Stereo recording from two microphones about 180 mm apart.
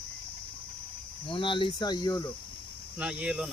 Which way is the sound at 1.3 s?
30° left (ahead or behind).